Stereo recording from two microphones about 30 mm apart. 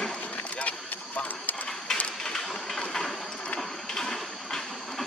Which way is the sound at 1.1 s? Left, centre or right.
Left.